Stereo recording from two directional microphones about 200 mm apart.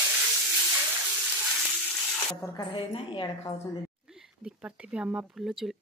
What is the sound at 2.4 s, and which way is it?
A woman's voice, 20° left (ahead or behind).